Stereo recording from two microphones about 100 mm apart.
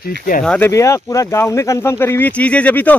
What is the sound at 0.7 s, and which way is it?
Speech, 30° left (ahead or behind).